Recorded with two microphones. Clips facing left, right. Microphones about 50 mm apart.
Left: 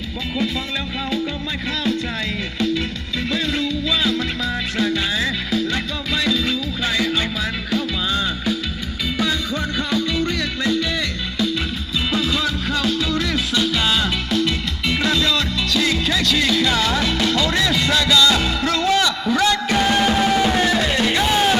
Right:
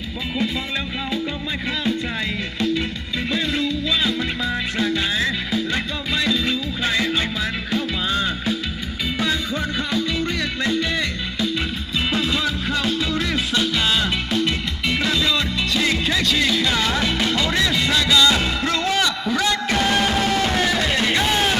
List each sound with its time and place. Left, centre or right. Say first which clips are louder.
2.6 s music: left 1 dB; centre
4.4 s music: even; centre
10.7 s music: left 1 dB; right
12.1 s music: left 2 dB; right
13.6 s music: left 1 dB; centre
15.7 s music: left 1 dB; right
17.6 s music: left 1 dB; centre
19.2 s music: left 3 dB; centre
20.8 s music: left 1 dB; centre